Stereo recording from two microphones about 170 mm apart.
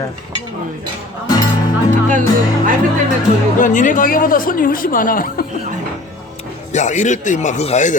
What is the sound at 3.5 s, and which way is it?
Speech, 50° left (ahead or behind).